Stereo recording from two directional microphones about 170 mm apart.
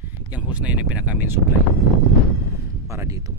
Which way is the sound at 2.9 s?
20° right (ahead or behind).